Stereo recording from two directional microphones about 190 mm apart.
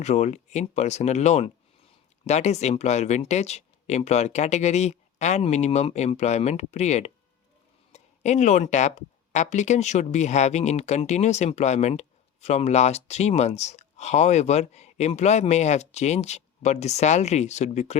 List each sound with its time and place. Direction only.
0.0 s speech: 35° left (ahead or behind)